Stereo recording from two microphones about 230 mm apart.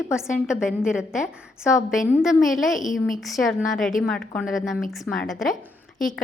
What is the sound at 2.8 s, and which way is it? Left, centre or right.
Speech, left.